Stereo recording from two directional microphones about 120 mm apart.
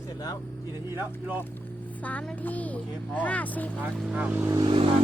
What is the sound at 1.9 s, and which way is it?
Speech, 15° left (ahead or behind).